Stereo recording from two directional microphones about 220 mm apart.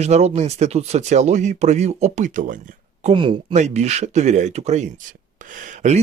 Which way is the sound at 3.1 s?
25° right (ahead or behind).